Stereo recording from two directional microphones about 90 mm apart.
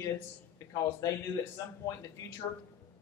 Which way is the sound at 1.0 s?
40° left (ahead or behind).